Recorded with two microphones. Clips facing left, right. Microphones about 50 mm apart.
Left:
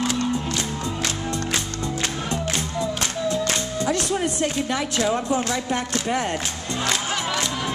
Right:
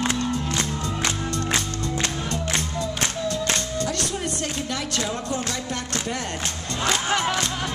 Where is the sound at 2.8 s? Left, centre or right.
Centre.